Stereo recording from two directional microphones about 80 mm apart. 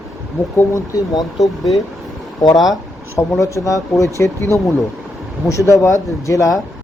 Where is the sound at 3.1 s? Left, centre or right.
Left.